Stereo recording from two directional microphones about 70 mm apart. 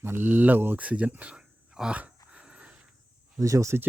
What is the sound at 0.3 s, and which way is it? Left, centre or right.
Speech, right.